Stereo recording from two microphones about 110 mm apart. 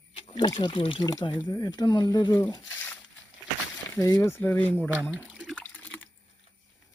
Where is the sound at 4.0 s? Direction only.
30° left (ahead or behind).